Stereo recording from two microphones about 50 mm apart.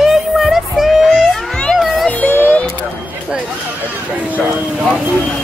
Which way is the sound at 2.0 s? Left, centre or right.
Left.